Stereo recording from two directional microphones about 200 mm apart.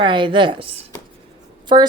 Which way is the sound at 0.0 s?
25° right (ahead or behind).